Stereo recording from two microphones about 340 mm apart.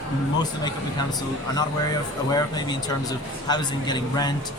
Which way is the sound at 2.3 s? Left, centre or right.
Centre.